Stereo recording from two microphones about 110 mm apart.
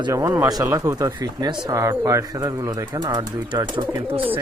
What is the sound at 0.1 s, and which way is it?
Speech, 30° right (ahead or behind).